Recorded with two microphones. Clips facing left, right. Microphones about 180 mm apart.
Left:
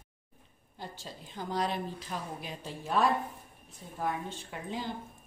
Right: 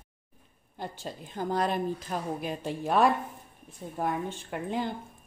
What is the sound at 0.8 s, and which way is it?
A woman's voice, 55° right (ahead or behind).